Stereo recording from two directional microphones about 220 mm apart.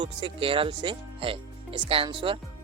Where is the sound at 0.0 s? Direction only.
25° right (ahead or behind).